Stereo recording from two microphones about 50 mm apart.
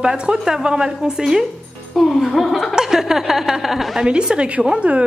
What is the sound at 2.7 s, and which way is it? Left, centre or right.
Speech, centre.